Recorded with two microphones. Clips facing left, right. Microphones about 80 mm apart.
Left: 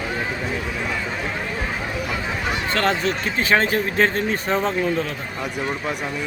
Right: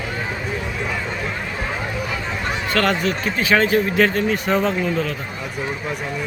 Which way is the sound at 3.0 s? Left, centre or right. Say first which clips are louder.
Right 1 dB; left.